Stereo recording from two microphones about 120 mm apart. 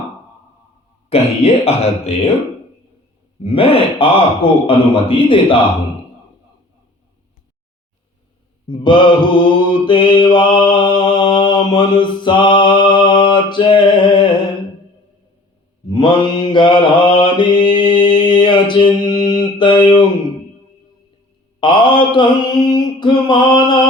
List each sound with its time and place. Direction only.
1.1 s speech: 60° left (ahead or behind)
3.4 s a man's voice: 50° left (ahead or behind)
8.6 s mantra: 40° left (ahead or behind)
15.9 s mantra: 40° left (ahead or behind)
21.6 s mantra: 40° left (ahead or behind)